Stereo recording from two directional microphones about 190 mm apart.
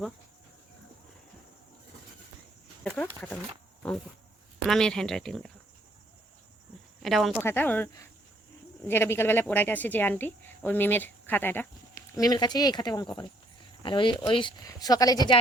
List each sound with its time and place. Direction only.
2.8 s speech: 5° left (ahead or behind)
4.6 s speech: 5° left (ahead or behind)
7.0 s speech: centre (ahead or behind)
7.4 s speech: 10° left (ahead or behind)